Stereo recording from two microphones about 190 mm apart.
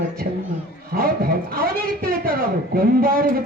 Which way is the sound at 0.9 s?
50° right (ahead or behind).